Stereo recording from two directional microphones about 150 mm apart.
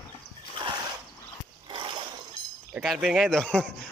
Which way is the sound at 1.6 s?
35° right (ahead or behind).